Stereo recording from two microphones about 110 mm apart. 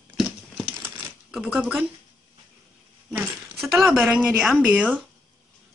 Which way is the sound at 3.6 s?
Centre (ahead or behind).